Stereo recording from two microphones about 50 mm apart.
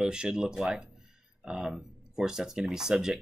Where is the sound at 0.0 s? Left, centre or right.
Centre.